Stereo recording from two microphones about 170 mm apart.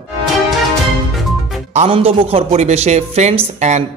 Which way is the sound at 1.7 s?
35° right (ahead or behind).